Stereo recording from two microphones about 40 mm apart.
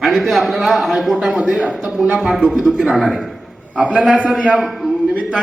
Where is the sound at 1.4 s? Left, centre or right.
Right.